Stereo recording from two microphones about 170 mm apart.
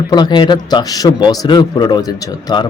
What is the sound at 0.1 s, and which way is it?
Speech, 25° left (ahead or behind).